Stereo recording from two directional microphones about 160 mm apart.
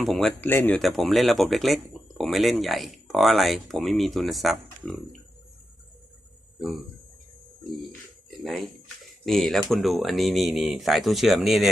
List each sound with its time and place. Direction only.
0.0 s speech: centre (ahead or behind)
0.4 s speech: 10° left (ahead or behind)
0.8 s speech: centre (ahead or behind)
9.2 s speech: centre (ahead or behind)